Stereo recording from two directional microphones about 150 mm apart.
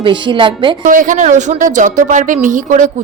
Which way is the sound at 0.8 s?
60° right (ahead or behind).